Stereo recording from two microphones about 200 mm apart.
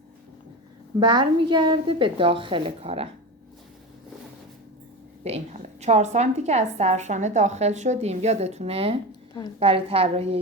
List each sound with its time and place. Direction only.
0.9 s a woman's voice: 25° right (ahead or behind)
5.2 s a woman's voice: 30° right (ahead or behind)